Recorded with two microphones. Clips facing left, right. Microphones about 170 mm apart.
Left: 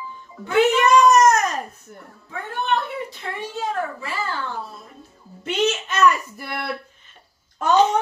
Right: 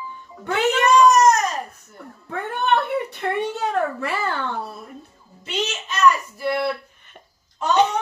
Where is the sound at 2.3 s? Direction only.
65° right (ahead or behind).